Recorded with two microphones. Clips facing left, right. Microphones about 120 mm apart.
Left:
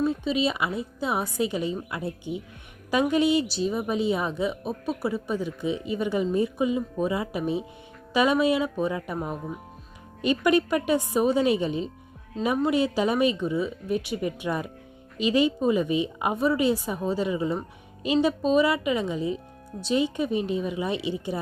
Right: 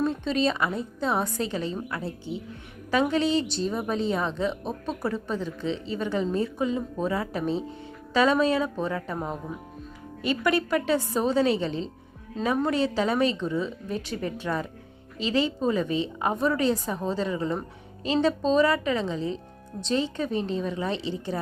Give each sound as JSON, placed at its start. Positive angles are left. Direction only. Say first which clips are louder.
{"t": 0.0, "sound": "a woman's voice", "louder": "even", "side_deg": 5}
{"t": 10.2, "sound": "a woman's voice", "louder": "left 3 dB", "side_deg": 20}